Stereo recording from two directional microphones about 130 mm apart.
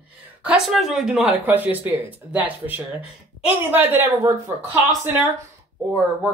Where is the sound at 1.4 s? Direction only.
15° right (ahead or behind).